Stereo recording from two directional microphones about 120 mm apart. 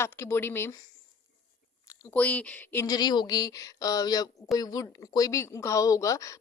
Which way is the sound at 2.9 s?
35° left (ahead or behind).